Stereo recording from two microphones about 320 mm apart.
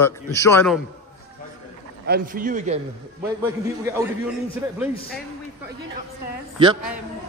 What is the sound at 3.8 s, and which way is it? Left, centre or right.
Speech, centre.